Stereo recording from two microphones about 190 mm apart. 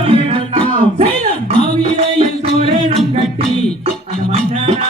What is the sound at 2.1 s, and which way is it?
Music, 30° right (ahead or behind).